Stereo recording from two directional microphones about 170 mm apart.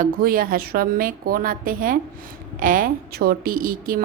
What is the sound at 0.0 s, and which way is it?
A woman's voice, 55° right (ahead or behind).